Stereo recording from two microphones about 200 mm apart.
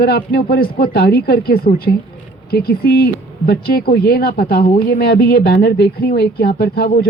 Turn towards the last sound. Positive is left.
turn(degrees=50)  # may be behind; listen again after turning